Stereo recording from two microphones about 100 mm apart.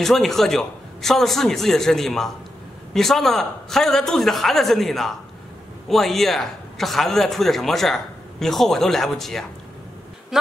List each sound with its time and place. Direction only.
0.0 s a man's voice: 5° left (ahead or behind)